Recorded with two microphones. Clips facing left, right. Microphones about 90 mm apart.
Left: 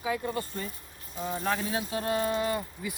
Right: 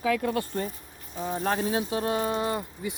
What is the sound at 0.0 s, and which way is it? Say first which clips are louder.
Speech: right 5 dB; 85° right.